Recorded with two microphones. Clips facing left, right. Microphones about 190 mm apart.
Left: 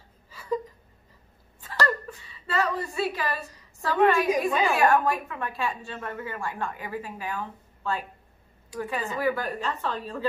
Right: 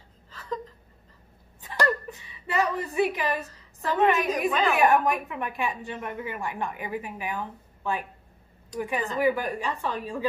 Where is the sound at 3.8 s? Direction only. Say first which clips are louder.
Left 1 dB; 20° right (ahead or behind).